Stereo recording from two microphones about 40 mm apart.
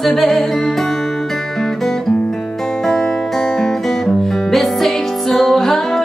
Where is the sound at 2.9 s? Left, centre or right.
Centre.